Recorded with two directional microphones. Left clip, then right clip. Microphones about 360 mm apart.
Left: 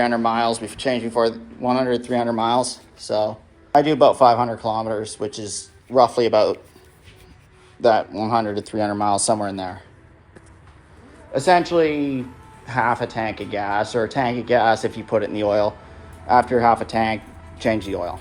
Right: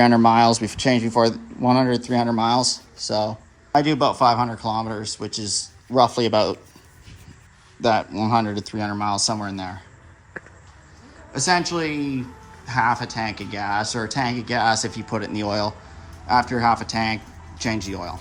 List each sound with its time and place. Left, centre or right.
0.0 s speech: centre
7.8 s speech: centre
11.3 s speech: centre